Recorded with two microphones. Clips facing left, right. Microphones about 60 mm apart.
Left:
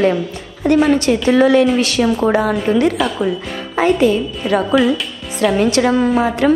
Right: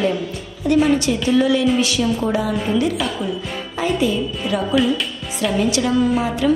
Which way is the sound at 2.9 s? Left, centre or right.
Centre.